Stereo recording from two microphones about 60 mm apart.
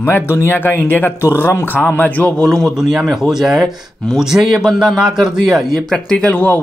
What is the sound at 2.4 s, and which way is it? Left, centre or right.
Speech, centre.